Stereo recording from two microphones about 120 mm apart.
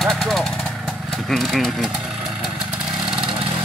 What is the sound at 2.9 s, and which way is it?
Vehicle, 40° right (ahead or behind).